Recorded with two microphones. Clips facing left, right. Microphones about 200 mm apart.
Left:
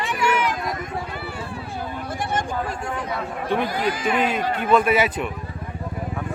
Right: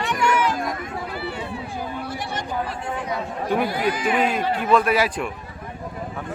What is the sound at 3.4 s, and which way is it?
Speech, 10° right (ahead or behind).